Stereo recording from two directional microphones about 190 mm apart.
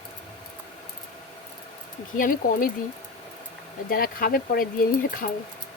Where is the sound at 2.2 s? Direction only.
50° left (ahead or behind).